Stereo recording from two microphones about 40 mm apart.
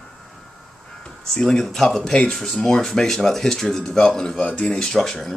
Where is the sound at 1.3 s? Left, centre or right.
Centre.